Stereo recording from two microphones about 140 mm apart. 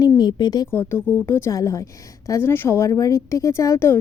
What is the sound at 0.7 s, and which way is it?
A woman's voice, 15° left (ahead or behind).